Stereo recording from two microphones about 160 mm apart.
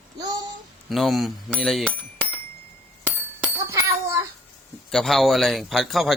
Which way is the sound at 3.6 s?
15° right (ahead or behind).